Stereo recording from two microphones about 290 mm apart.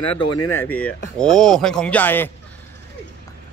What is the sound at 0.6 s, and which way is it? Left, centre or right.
Speech, centre.